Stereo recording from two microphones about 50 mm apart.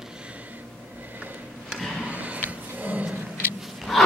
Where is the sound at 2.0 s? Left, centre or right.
Right.